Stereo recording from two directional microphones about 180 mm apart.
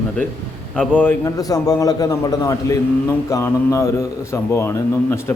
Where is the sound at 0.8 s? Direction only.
5° left (ahead or behind).